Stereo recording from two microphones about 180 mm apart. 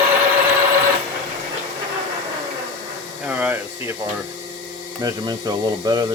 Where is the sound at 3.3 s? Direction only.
10° right (ahead or behind).